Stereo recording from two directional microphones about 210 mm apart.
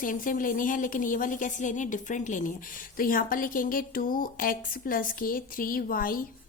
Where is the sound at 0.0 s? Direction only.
40° left (ahead or behind).